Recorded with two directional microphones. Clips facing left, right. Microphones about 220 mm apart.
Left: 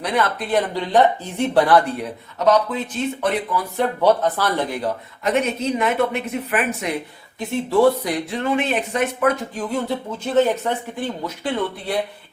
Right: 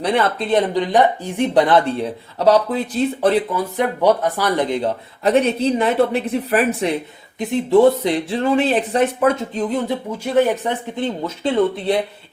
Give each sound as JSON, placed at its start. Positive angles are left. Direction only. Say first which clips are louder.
{"t": 0.0, "sound": "speech", "louder": "right 3 dB", "side_deg": -30}
{"t": 3.8, "sound": "speech", "louder": "right 1 dB", "side_deg": -15}
{"t": 7.3, "sound": "speech", "louder": "right 4 dB", "side_deg": -20}